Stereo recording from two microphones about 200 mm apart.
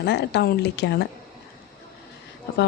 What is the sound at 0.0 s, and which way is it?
Speech, 55° left (ahead or behind).